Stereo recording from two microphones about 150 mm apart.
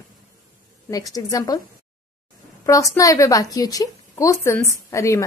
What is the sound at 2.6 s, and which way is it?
A woman's voice, 20° left (ahead or behind).